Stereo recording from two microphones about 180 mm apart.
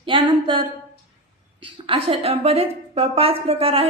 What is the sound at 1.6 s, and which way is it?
A woman's voice, 30° right (ahead or behind).